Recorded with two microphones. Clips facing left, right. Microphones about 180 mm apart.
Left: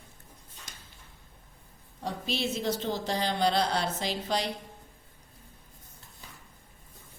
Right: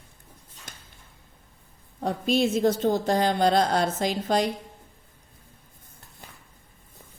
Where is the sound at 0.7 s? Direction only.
50° right (ahead or behind).